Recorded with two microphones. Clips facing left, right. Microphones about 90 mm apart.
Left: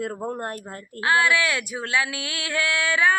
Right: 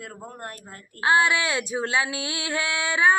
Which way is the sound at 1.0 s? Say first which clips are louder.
Even; 25° right (ahead or behind).